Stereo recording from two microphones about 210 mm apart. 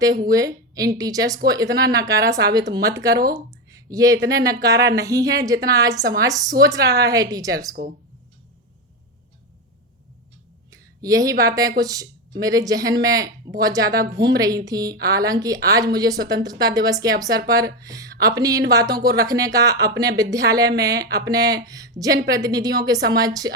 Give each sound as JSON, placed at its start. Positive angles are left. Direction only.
{"t": 0.3, "sound": "a woman's voice", "side_deg": -15}
{"t": 3.3, "sound": "a sound", "side_deg": -15}
{"t": 4.3, "sound": "speech", "side_deg": -15}
{"t": 7.8, "sound": "speech", "side_deg": -50}
{"t": 10.7, "sound": "speech", "side_deg": -15}